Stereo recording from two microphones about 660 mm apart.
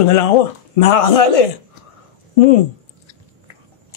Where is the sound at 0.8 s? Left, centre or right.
Left.